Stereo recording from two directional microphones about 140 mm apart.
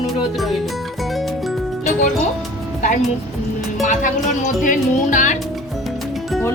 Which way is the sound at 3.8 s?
60° left (ahead or behind).